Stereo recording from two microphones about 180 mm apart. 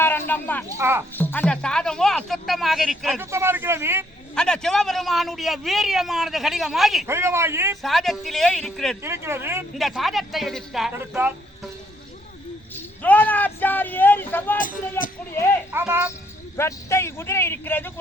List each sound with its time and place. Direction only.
0.0 s a sound: 10° left (ahead or behind)
0.8 s speech: 15° right (ahead or behind)
1.1 s a man's voice: 10° left (ahead or behind)
3.2 s speech: 15° right (ahead or behind)
4.4 s a man's voice: 5° left (ahead or behind)
7.1 s speech: 15° right (ahead or behind)
7.8 s a man's voice: centre (ahead or behind)
9.0 s speech: 15° right (ahead or behind)
9.7 s a man's voice: centre (ahead or behind)
10.9 s speech: 10° right (ahead or behind)
12.7 s speech: 10° left (ahead or behind)
15.7 s speech: 10° right (ahead or behind)
16.6 s a man's voice: 15° left (ahead or behind)